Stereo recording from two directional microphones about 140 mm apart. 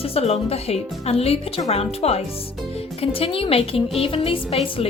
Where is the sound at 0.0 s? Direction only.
45° left (ahead or behind).